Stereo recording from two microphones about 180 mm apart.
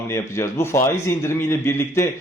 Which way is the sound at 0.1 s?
15° left (ahead or behind).